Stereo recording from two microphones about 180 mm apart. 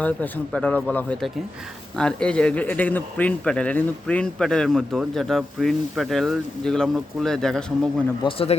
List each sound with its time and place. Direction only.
0.0 s speech: 5° left (ahead or behind)
8.2 s speech: 30° left (ahead or behind)